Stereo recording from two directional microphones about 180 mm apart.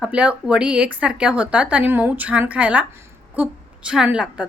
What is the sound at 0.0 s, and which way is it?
Speech, 5° right (ahead or behind).